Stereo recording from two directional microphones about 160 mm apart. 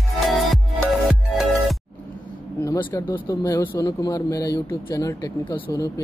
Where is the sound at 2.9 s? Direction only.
20° left (ahead or behind).